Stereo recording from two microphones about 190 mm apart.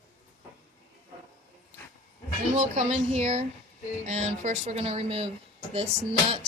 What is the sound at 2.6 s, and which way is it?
A woman's voice, 35° right (ahead or behind).